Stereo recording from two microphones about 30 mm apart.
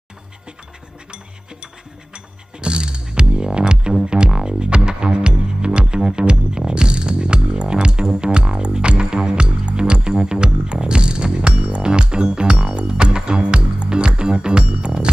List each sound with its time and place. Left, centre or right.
2.1 s music: right